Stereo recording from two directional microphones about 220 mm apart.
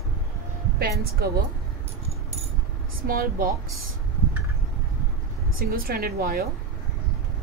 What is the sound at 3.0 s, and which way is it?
Speech, 40° right (ahead or behind).